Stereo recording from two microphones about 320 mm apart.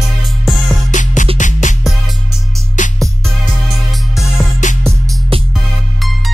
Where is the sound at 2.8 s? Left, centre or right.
Left.